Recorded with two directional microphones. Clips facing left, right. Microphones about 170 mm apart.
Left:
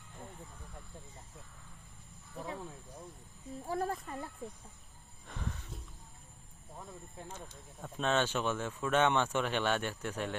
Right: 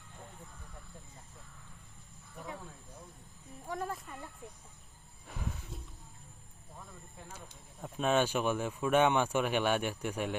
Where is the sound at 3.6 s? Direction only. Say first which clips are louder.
Left 3 dB; 35° left (ahead or behind).